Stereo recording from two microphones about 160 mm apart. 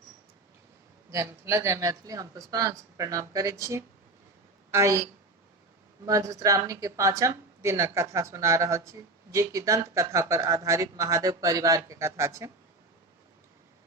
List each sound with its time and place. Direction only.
1.1 s speech: 15° right (ahead or behind)
6.1 s speech: 20° right (ahead or behind)